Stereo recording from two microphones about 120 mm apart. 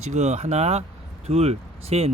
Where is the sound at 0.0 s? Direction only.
70° right (ahead or behind).